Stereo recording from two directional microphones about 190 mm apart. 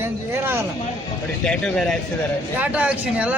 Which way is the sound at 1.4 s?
5° left (ahead or behind).